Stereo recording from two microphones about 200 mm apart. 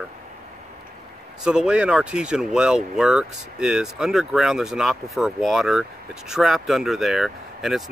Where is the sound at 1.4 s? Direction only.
5° right (ahead or behind).